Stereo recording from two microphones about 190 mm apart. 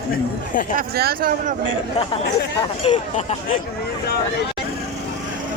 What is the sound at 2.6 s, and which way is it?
Speech, 25° left (ahead or behind).